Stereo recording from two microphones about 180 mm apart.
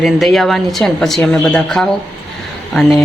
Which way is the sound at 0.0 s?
Centre (ahead or behind).